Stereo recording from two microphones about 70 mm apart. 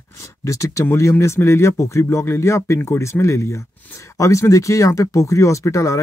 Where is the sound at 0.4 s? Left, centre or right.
Left.